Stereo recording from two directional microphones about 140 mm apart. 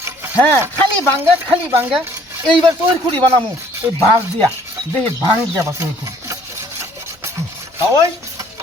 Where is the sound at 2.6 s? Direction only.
20° right (ahead or behind).